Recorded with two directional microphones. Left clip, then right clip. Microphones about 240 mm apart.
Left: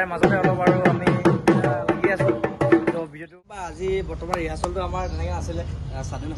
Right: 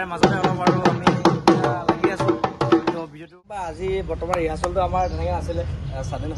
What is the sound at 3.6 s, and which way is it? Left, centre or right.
Speech, centre.